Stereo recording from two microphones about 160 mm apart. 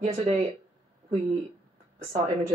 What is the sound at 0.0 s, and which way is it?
Speech, 45° right (ahead or behind).